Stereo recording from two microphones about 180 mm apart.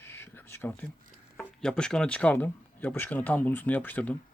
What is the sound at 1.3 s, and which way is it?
Speech, 5° left (ahead or behind).